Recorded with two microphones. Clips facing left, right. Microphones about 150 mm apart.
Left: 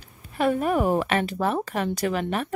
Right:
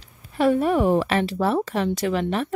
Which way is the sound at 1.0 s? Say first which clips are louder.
Right 2 dB; 30° right (ahead or behind).